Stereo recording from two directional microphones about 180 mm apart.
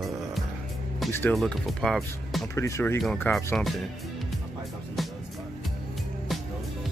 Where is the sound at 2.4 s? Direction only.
15° left (ahead or behind).